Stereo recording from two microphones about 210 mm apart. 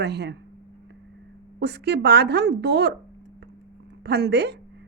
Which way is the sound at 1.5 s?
50° right (ahead or behind).